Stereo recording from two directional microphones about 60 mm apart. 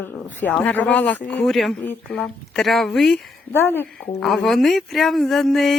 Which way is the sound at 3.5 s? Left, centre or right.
Left.